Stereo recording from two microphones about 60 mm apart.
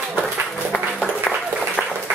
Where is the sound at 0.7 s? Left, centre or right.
Left.